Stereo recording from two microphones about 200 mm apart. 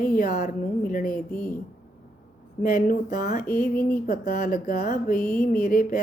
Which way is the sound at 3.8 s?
10° left (ahead or behind).